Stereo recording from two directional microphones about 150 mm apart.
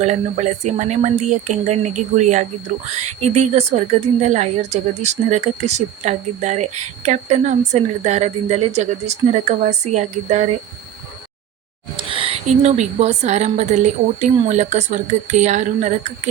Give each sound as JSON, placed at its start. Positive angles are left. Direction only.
{"t": 0.0, "sound": "speech", "side_deg": -50}
{"t": 12.1, "sound": "speech", "side_deg": -40}